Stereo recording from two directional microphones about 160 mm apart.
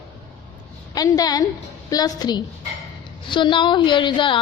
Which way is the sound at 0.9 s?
25° left (ahead or behind).